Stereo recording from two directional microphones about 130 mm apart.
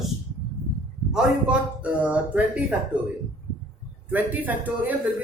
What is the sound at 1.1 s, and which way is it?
Speech, 10° right (ahead or behind).